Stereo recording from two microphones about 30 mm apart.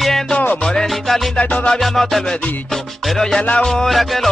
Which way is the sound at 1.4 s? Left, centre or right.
Left.